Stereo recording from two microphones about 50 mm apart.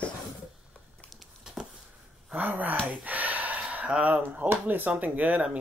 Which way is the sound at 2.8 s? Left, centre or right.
Right.